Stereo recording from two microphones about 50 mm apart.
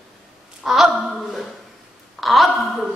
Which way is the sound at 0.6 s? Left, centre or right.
Centre.